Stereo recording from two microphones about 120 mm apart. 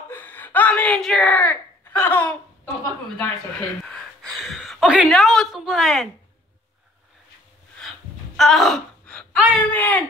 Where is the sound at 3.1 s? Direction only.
10° left (ahead or behind).